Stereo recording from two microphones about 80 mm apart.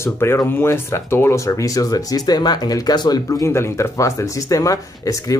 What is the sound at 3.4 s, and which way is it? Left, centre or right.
Speech, left.